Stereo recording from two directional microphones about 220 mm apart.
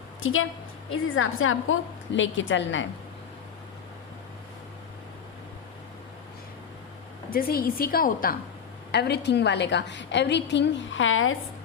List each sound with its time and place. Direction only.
0.2 s a woman's voice: 65° left (ahead or behind)
7.3 s a woman's voice: 40° left (ahead or behind); by 11.3 s 65° left (ahead or behind)